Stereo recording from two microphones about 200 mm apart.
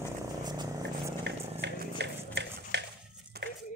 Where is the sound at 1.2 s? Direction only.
60° right (ahead or behind).